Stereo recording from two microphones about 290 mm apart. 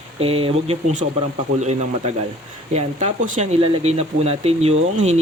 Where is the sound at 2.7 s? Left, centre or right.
Right.